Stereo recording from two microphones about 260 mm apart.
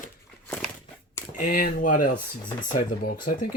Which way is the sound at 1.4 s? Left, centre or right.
Left.